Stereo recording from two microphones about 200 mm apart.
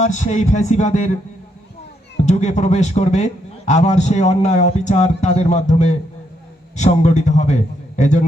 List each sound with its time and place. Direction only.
0.0 s a man's voice: 35° left (ahead or behind)
2.2 s a man's voice: 35° left (ahead or behind)